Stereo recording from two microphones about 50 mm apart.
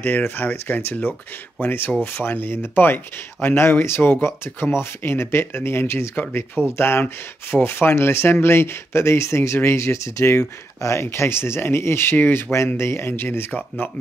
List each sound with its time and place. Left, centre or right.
0.2 s speech: left
1.6 s speech: left
13.5 s speech: left